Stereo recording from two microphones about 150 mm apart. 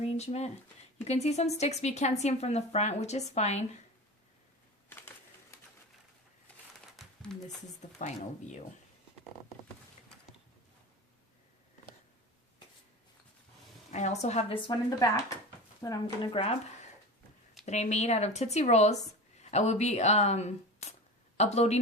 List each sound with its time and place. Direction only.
0.0 s a woman's voice: 45° left (ahead or behind)
4.9 s typewriter: 15° left (ahead or behind)
6.9 s a sound: centre (ahead or behind)
7.4 s a woman's voice: 50° left (ahead or behind)
13.9 s a woman's voice: 50° left (ahead or behind)
14.7 s speech: 25° left (ahead or behind)
16.3 s speech: 40° left (ahead or behind)
17.7 s a woman's voice: 50° left (ahead or behind)